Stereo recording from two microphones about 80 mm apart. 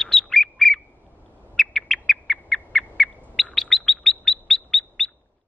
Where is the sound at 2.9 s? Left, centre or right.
Centre.